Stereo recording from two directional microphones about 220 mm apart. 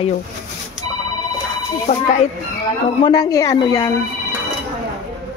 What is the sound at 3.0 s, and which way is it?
Speech, 15° left (ahead or behind).